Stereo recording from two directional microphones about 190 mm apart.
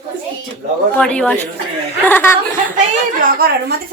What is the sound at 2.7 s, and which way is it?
A woman's voice, 45° right (ahead or behind).